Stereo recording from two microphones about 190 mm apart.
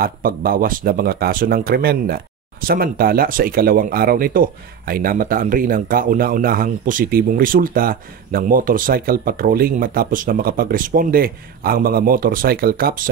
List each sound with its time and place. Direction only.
0.0 s speech: 50° right (ahead or behind)